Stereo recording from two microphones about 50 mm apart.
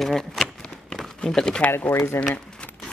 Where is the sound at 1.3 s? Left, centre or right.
Centre.